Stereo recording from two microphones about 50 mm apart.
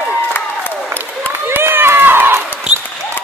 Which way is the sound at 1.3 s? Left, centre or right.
Right.